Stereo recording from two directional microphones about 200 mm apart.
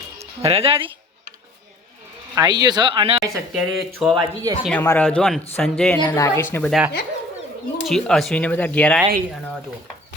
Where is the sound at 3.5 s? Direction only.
Centre (ahead or behind).